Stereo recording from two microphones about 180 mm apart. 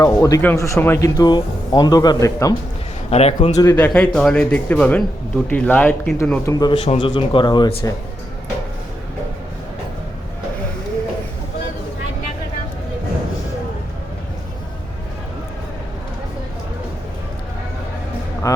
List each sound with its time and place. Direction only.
0.0 s speech: 20° left (ahead or behind)
3.1 s a man's voice: 35° left (ahead or behind)
3.8 s speech: 10° left (ahead or behind)
6.4 s speech: 20° left (ahead or behind)
18.4 s music: 20° left (ahead or behind)